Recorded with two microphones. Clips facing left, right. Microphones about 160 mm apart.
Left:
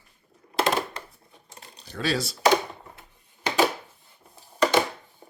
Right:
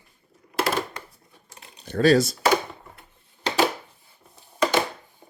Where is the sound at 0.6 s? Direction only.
20° left (ahead or behind).